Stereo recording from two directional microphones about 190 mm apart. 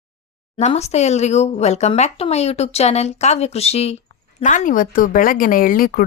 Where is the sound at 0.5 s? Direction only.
30° left (ahead or behind).